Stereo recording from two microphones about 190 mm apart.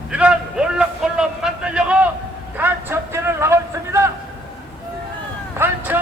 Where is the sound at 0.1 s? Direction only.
5° right (ahead or behind).